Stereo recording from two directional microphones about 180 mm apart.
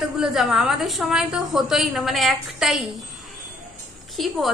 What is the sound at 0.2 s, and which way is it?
A woman's voice, centre (ahead or behind).